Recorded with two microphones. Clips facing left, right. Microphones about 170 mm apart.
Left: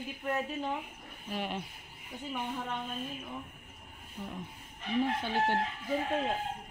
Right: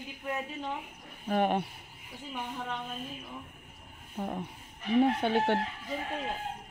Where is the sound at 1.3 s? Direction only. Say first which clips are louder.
Right 9 dB; 55° right (ahead or behind).